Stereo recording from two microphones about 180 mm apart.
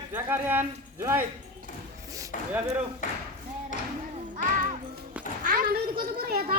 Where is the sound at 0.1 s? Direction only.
10° right (ahead or behind).